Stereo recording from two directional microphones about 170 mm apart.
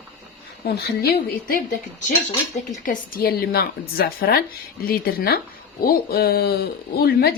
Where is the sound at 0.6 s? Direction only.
65° left (ahead or behind).